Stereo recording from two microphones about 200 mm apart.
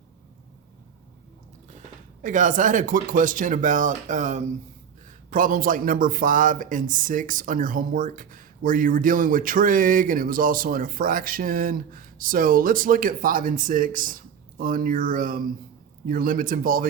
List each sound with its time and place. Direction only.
2.2 s speech: 40° right (ahead or behind)